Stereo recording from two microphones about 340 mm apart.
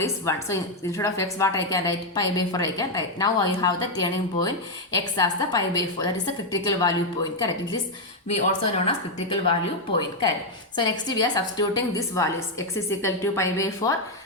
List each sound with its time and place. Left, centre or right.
0.0 s a woman's voice: centre
8.3 s a woman's voice: centre
10.8 s a woman's voice: centre